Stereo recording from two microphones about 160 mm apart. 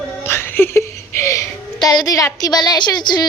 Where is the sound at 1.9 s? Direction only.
20° left (ahead or behind).